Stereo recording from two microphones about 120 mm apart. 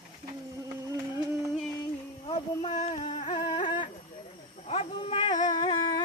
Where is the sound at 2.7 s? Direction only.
70° left (ahead or behind).